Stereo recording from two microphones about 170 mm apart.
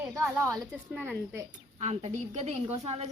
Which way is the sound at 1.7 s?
40° right (ahead or behind).